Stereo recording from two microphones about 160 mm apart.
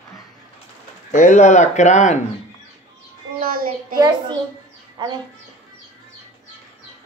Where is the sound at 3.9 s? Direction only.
25° right (ahead or behind).